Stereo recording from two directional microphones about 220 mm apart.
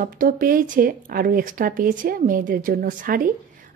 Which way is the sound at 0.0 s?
40° right (ahead or behind).